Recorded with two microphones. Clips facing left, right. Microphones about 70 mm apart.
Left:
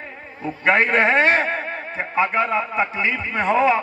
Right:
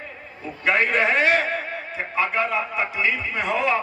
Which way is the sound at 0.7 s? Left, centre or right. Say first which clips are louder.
Left 3 dB; left.